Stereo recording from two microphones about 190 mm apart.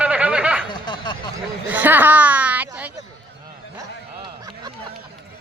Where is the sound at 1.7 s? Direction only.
10° right (ahead or behind).